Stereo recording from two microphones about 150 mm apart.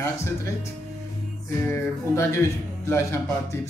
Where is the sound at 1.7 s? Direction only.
15° left (ahead or behind).